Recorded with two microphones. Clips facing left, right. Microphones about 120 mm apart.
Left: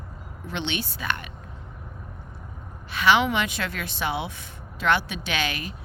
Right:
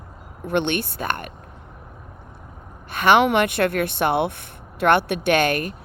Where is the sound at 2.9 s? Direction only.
50° right (ahead or behind).